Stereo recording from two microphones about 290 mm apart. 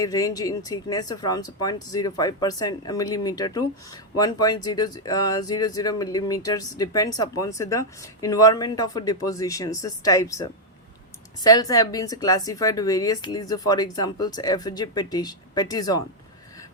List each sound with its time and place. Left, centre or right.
0.0 s speech: centre